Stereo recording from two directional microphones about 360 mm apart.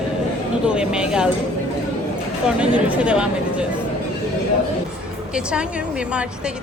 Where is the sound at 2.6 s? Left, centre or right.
Centre.